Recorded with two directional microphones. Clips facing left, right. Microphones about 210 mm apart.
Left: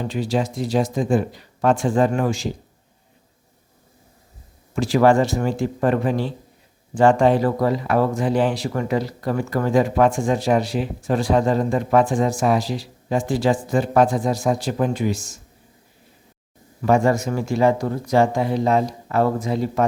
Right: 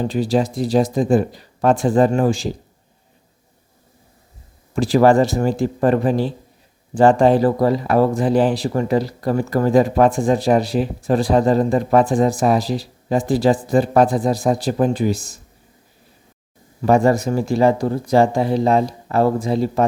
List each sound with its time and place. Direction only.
0.0 s speech: 35° right (ahead or behind)
4.7 s speech: 35° right (ahead or behind)
16.8 s speech: 35° right (ahead or behind)